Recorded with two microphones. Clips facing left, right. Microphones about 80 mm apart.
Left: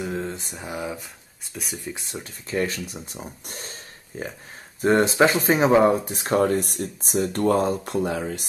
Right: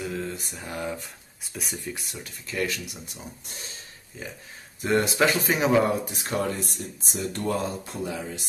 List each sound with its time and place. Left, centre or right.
0.0 s mantra: left
0.7 s speech: centre
2.0 s speech: left
3.4 s speech: left
4.8 s speech: left
6.5 s speech: left
7.8 s speech: left